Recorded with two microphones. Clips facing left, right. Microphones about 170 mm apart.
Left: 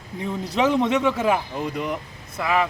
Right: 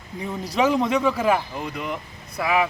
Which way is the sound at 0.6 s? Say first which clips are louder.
Even; 5° right (ahead or behind).